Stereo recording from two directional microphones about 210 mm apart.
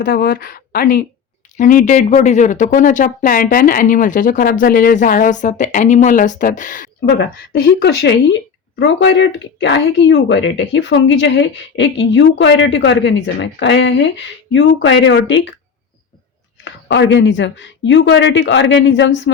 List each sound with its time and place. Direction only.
0.0 s a woman's voice: 45° left (ahead or behind)
7.0 s a woman's voice: 50° left (ahead or behind)
16.6 s a woman's voice: 60° left (ahead or behind)